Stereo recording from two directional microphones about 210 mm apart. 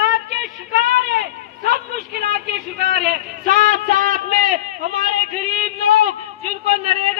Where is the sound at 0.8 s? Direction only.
50° right (ahead or behind).